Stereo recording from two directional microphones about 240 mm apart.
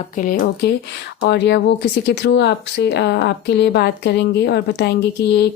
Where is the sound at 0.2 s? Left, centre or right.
Left.